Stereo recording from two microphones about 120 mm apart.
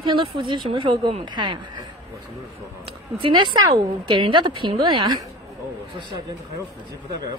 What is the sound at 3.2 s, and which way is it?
A woman's voice, 45° right (ahead or behind).